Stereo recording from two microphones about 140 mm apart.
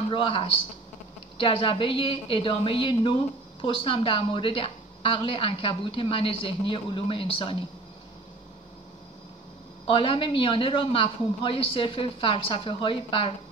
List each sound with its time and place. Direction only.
0.1 s a woman's voice: 40° left (ahead or behind)
9.8 s a woman's voice: 40° left (ahead or behind)